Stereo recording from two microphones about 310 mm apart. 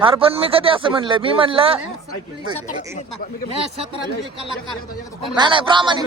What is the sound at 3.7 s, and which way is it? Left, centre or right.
Speech, centre.